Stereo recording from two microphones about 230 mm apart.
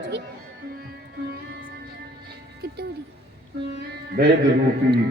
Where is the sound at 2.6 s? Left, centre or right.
Right.